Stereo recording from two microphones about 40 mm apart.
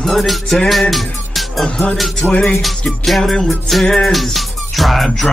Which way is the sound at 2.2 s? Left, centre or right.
Right.